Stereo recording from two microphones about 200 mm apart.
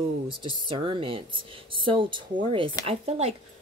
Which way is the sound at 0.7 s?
25° right (ahead or behind).